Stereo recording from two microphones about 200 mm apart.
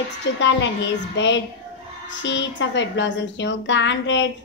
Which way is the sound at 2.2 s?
65° left (ahead or behind).